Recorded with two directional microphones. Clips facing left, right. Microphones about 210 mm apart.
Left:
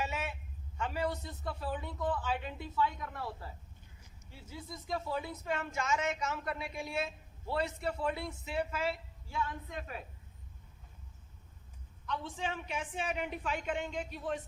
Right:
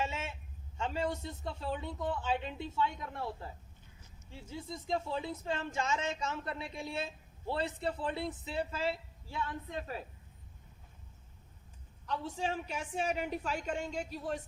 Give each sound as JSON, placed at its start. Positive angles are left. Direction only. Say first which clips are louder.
{"t": 0.0, "sound": "a sound", "louder": "even", "side_deg": -25}
{"t": 0.8, "sound": "a woman's voice", "louder": "right 1 dB", "side_deg": -25}
{"t": 12.0, "sound": "a woman's voice", "louder": "right 2 dB", "side_deg": -35}